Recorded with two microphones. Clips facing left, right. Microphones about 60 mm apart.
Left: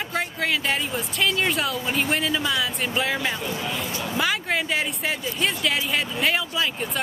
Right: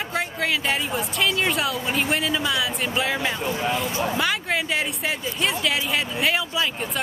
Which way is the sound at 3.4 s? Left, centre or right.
Right.